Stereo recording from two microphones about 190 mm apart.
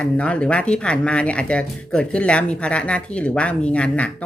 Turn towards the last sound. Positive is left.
turn(degrees=5)  # may be behind; listen again after turning